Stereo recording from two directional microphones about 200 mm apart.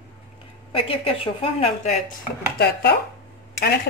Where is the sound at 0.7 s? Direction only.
30° left (ahead or behind).